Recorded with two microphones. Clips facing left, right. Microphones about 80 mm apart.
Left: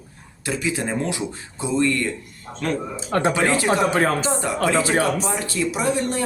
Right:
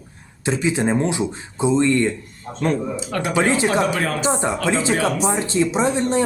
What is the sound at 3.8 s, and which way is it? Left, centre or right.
Speech, left.